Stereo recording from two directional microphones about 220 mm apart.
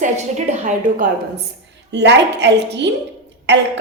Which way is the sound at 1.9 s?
50° right (ahead or behind).